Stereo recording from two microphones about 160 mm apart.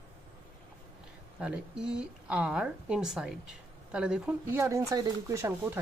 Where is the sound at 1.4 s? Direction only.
5° right (ahead or behind).